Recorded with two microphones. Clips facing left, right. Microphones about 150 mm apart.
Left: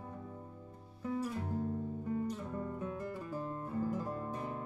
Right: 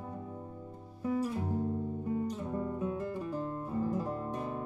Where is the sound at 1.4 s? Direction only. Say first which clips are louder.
Right 4 dB; 25° right (ahead or behind).